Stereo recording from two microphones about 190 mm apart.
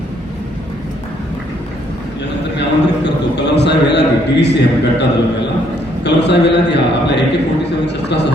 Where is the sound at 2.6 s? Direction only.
65° left (ahead or behind).